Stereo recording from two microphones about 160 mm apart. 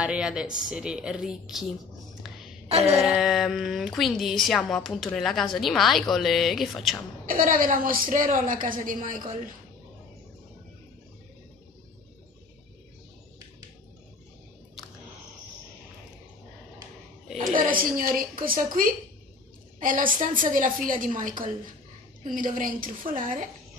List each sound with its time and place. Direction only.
0.0 s speech: 5° right (ahead or behind)
2.7 s a sound: 40° right (ahead or behind)
3.0 s speech: centre (ahead or behind)
7.2 s a woman's voice: 60° right (ahead or behind)
17.6 s a woman's voice: 65° right (ahead or behind)
19.8 s a woman's voice: 55° right (ahead or behind)